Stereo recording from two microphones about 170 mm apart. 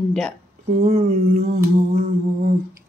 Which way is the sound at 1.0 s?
55° right (ahead or behind).